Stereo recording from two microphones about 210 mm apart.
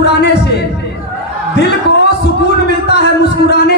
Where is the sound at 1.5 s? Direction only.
55° left (ahead or behind).